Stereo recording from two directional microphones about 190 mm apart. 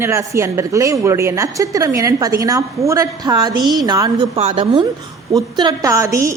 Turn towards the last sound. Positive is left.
turn(degrees=-15)  # may be behind; listen again after turning